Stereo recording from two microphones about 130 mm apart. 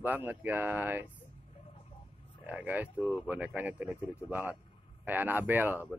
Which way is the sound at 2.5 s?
10° right (ahead or behind).